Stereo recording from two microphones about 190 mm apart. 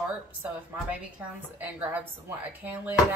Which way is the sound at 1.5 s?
10° right (ahead or behind).